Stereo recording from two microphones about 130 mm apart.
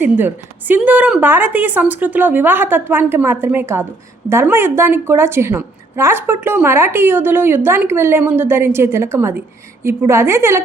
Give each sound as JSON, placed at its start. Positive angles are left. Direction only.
{"t": 0.0, "sound": "a woman's voice", "side_deg": -15}